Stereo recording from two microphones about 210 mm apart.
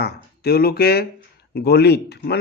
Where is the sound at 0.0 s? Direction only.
50° left (ahead or behind).